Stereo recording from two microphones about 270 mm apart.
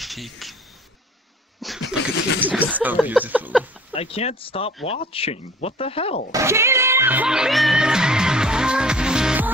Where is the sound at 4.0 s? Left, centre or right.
Left.